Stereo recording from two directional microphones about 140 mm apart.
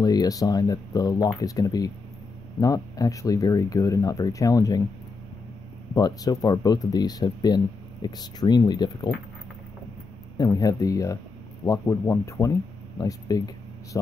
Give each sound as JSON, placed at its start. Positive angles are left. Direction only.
{"t": 0.0, "sound": "speech", "side_deg": 30}
{"t": 5.9, "sound": "speech", "side_deg": 30}
{"t": 10.3, "sound": "speech", "side_deg": 25}